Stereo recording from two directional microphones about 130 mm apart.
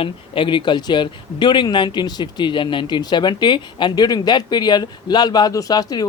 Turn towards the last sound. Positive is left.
turn(degrees=30)  # may be behind; listen again after turning